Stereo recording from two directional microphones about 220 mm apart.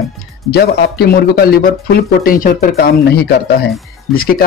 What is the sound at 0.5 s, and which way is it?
Speech, 45° left (ahead or behind).